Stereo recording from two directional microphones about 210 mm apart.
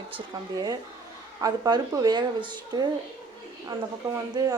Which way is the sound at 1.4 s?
15° right (ahead or behind).